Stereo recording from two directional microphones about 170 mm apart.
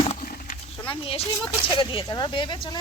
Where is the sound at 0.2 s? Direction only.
55° left (ahead or behind).